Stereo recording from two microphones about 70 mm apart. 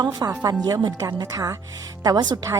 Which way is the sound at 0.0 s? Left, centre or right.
Right.